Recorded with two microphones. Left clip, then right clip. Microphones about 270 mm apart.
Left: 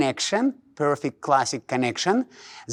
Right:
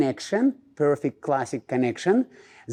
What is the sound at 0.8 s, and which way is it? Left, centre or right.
Speech, left.